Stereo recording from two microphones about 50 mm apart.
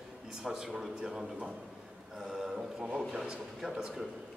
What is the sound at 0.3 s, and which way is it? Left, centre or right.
A man's voice, centre.